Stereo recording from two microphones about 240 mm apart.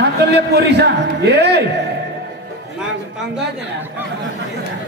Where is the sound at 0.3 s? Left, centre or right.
Right.